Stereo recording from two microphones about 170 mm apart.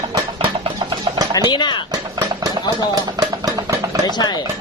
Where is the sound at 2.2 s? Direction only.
20° right (ahead or behind).